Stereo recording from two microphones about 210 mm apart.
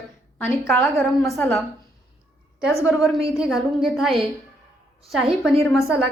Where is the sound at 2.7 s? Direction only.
Centre (ahead or behind).